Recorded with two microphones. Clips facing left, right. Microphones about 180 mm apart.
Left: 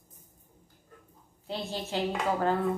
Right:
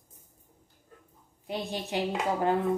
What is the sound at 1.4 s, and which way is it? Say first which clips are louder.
Speech: right 1 dB; 15° right (ahead or behind).